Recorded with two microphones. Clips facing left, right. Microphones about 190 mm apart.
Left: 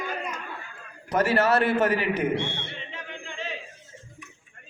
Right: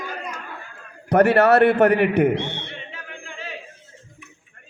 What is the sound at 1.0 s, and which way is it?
A man's voice, 60° right (ahead or behind).